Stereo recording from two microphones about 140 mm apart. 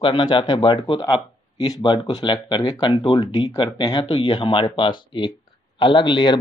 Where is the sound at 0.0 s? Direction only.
35° left (ahead or behind).